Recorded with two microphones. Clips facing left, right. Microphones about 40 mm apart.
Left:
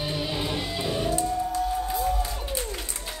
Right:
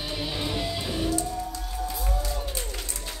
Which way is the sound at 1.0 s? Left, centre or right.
Left.